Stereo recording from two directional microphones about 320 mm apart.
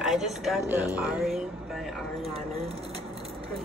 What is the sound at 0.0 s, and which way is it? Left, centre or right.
Speech, centre.